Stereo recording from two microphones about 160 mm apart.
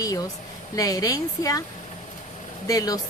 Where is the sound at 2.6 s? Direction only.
20° left (ahead or behind).